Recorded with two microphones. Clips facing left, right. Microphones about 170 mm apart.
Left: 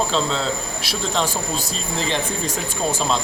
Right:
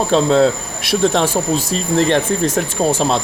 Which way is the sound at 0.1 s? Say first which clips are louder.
Right 10 dB; 55° right (ahead or behind).